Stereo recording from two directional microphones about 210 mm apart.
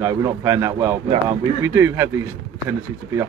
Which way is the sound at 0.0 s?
15° right (ahead or behind).